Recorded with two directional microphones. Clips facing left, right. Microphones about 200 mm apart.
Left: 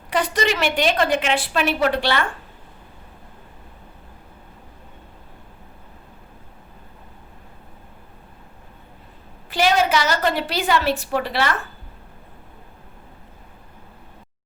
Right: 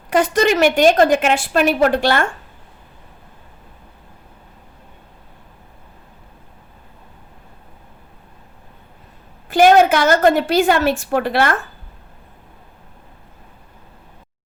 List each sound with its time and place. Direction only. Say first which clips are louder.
0.1 s a woman's voice: right 6 dB; 50° right (ahead or behind)
9.5 s a woman's voice: right 8 dB; 50° right (ahead or behind)